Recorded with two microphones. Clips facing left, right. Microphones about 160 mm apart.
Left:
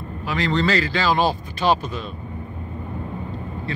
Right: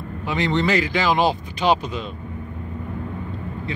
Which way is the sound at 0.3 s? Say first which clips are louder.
Right 1 dB; 20° right (ahead or behind).